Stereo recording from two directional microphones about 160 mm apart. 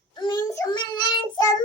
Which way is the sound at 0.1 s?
30° left (ahead or behind).